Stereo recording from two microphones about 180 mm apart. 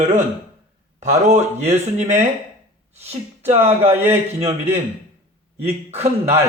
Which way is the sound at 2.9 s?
35° right (ahead or behind).